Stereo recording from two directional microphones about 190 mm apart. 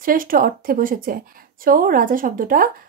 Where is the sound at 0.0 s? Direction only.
45° right (ahead or behind).